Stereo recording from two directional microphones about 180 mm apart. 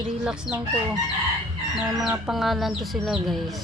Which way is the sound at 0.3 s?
5° right (ahead or behind).